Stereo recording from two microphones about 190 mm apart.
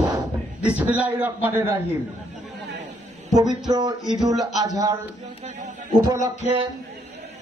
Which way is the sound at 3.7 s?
20° right (ahead or behind).